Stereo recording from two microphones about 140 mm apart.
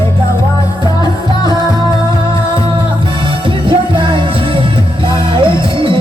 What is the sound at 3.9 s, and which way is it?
Music, 35° right (ahead or behind).